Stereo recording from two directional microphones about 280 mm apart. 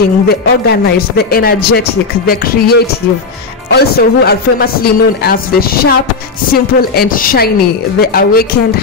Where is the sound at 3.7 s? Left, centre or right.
Left.